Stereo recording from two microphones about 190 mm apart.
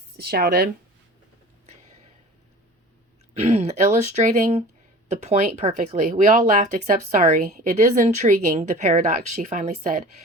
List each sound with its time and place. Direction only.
0.2 s speech: 55° right (ahead or behind)
1.6 s a sound: 35° right (ahead or behind)
3.3 s speech: 35° right (ahead or behind)